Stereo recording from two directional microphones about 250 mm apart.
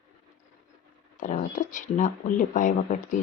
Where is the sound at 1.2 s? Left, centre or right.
Left.